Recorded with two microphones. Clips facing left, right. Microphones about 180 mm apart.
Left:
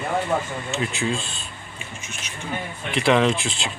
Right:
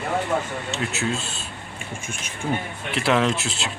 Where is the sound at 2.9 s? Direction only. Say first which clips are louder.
Left 2 dB; centre (ahead or behind).